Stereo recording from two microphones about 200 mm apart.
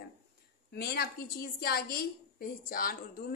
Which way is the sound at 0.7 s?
55° left (ahead or behind).